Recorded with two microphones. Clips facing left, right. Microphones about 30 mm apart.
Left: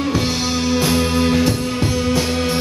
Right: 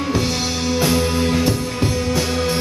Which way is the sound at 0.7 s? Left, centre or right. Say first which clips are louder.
Even; centre.